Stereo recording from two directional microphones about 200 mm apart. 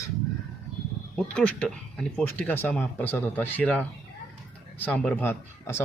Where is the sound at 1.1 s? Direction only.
5° left (ahead or behind).